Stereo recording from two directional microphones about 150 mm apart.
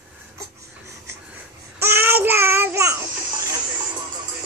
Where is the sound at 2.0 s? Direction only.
15° right (ahead or behind).